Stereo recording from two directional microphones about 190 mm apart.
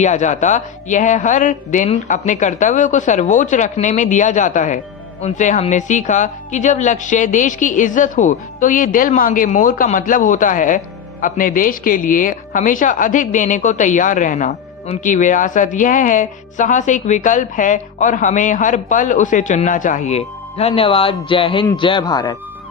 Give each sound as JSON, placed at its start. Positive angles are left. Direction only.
{"t": 0.0, "sound": "a woman's voice", "side_deg": 40}